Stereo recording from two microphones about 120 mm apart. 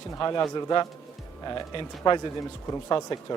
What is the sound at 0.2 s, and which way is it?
A man's voice, 30° left (ahead or behind).